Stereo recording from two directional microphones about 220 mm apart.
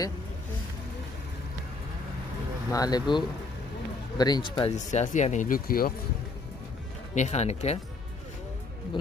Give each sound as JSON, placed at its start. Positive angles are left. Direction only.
{"t": 2.7, "sound": "speech", "side_deg": 15}
{"t": 4.7, "sound": "speech", "side_deg": 35}
{"t": 7.2, "sound": "speech", "side_deg": 30}